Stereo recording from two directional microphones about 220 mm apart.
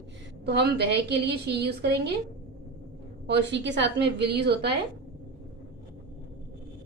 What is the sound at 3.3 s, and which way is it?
A woman's voice, 50° right (ahead or behind).